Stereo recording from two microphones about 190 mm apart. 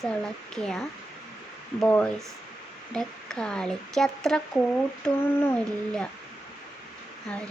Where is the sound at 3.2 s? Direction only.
5° left (ahead or behind).